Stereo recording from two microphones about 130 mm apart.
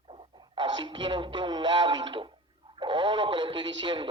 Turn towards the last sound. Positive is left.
turn(degrees=-35)  # may be behind; listen again after turning